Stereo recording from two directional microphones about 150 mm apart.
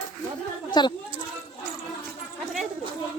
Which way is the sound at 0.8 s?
30° left (ahead or behind).